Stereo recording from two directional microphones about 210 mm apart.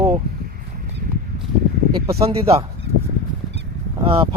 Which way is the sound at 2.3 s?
30° right (ahead or behind).